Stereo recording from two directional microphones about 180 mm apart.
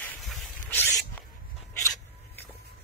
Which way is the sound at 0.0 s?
5° left (ahead or behind).